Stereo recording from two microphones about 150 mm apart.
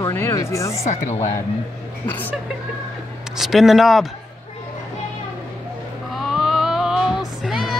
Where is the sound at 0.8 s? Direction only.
50° left (ahead or behind).